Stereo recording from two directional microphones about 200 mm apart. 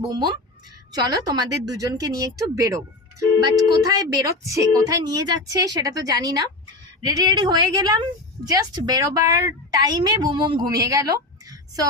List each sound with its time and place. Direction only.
0.1 s a woman's voice: 20° right (ahead or behind)
3.8 s a woman's voice: 15° right (ahead or behind)